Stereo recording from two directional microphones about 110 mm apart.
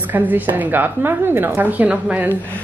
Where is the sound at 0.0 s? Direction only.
15° right (ahead or behind).